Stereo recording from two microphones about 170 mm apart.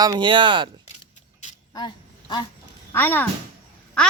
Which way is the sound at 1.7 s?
25° left (ahead or behind).